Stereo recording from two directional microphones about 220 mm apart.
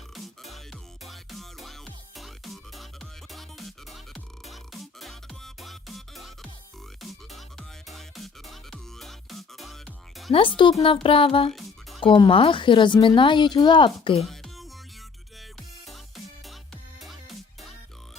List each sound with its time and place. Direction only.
0.1 s music: centre (ahead or behind)
10.8 s speech: 25° left (ahead or behind)
14.2 s music: centre (ahead or behind)